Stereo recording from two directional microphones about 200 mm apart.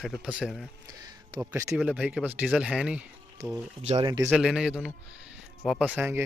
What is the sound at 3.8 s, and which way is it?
Speech, 25° right (ahead or behind).